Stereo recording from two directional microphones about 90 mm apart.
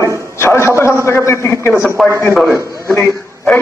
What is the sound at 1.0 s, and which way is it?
Speech, 30° left (ahead or behind).